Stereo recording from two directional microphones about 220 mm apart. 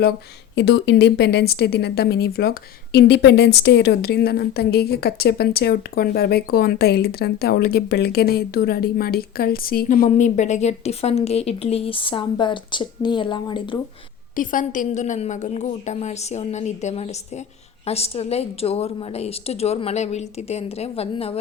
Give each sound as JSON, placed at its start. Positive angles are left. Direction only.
{"t": 0.5, "sound": "a woman's voice", "side_deg": 50}
{"t": 14.3, "sound": "a woman's voice", "side_deg": 35}